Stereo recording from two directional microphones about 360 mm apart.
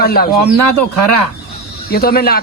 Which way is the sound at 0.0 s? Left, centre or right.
Left.